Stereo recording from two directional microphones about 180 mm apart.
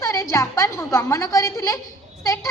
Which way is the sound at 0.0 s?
15° left (ahead or behind).